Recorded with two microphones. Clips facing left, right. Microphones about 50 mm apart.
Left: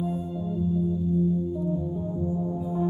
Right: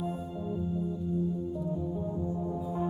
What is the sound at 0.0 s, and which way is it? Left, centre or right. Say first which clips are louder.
Music: left 5 dB; right.